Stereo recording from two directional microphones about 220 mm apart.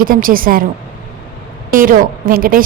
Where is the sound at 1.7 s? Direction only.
40° right (ahead or behind).